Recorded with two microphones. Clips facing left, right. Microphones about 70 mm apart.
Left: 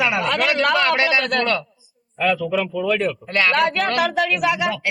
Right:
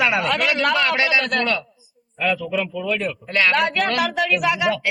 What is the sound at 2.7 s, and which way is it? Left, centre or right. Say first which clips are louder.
Speech: left 3 dB; left.